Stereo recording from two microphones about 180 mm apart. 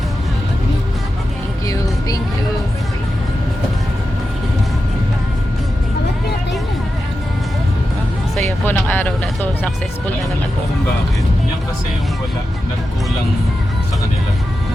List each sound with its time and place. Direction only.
1.6 s music: 20° left (ahead or behind)
8.4 s music: 10° left (ahead or behind)
9.2 s vehicle: 5° left (ahead or behind)